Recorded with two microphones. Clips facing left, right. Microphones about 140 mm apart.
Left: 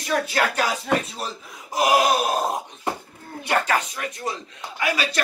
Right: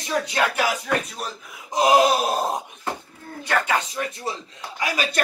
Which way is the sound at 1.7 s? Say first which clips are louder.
Right 2 dB; 25° right (ahead or behind).